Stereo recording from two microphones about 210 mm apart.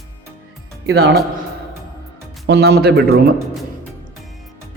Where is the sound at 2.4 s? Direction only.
50° right (ahead or behind).